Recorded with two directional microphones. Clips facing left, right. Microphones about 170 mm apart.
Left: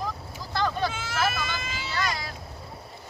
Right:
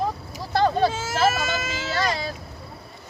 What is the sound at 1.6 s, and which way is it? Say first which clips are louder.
Speech: right 6 dB; 90° right.